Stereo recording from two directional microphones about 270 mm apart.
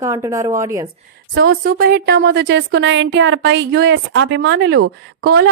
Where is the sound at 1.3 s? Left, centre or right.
Right.